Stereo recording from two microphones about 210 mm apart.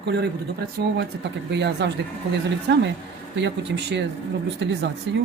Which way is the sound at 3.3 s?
55° right (ahead or behind).